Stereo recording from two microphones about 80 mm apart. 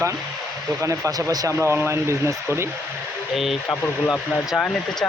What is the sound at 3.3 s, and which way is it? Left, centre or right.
Speech, centre.